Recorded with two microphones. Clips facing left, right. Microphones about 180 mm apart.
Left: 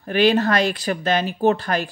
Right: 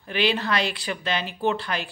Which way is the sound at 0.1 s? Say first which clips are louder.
Left 7 dB; 45° left (ahead or behind).